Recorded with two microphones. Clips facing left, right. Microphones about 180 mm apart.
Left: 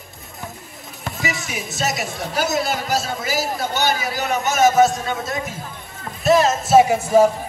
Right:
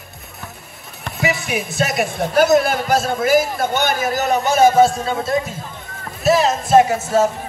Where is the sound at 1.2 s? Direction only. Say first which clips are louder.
Right 7 dB; 60° right (ahead or behind); by 5.4 s 30° right (ahead or behind).